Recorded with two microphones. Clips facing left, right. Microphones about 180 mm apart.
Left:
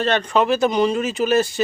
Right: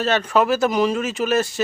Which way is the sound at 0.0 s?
5° right (ahead or behind).